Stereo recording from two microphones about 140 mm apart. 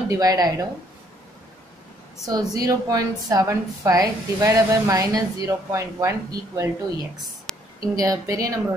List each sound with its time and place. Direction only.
0.1 s a woman's voice: 25° right (ahead or behind)
2.2 s a woman's voice: 25° right (ahead or behind)
7.5 s a sound: 5° left (ahead or behind)
7.9 s a woman's voice: 25° right (ahead or behind)